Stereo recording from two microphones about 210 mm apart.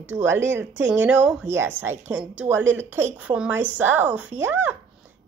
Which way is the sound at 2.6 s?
65° right (ahead or behind).